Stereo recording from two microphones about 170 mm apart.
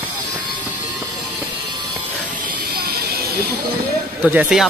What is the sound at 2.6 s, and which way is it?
Music, 60° right (ahead or behind).